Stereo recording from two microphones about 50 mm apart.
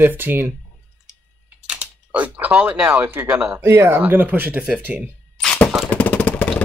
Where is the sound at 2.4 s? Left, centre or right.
Right.